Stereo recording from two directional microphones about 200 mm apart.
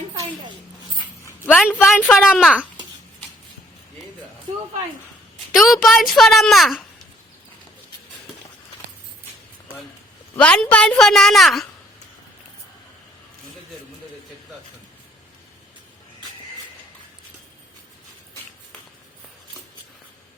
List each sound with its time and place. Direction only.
0.1 s a sound: 25° right (ahead or behind)
1.5 s speech: centre (ahead or behind)
5.5 s a woman's voice: centre (ahead or behind)
10.3 s a woman's voice: 5° left (ahead or behind)